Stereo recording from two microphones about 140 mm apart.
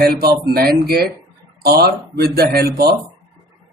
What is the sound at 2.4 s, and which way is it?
Speech, 90° right.